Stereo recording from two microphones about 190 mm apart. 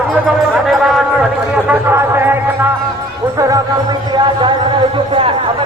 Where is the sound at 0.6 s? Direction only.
Centre (ahead or behind).